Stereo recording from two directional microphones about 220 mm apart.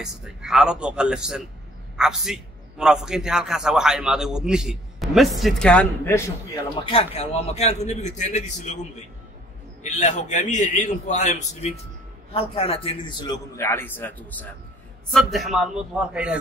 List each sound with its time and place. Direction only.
0.0 s a man's voice: centre (ahead or behind)
7.2 s a man's voice: 30° left (ahead or behind)
9.8 s a man's voice: 30° left (ahead or behind); by 16.3 s 5° right (ahead or behind)